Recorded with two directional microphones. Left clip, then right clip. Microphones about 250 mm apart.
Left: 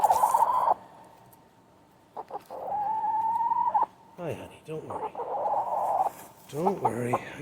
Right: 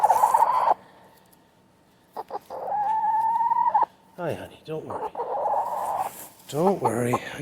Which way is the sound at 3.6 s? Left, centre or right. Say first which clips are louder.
Right 4 dB; right.